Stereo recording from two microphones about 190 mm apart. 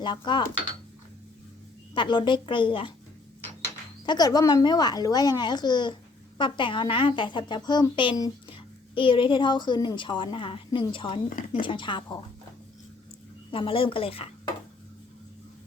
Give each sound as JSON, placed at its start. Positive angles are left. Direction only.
{"t": 0.0, "sound": "a woman's voice", "side_deg": 25}
{"t": 2.0, "sound": "a woman's voice", "side_deg": 25}
{"t": 4.0, "sound": "a woman's voice", "side_deg": 20}
{"t": 11.3, "sound": "speech", "side_deg": 45}
{"t": 11.6, "sound": "a woman's voice", "side_deg": 25}
{"t": 13.5, "sound": "a woman's voice", "side_deg": 30}